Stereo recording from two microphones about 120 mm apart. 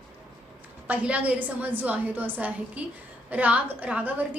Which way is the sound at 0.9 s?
10° right (ahead or behind).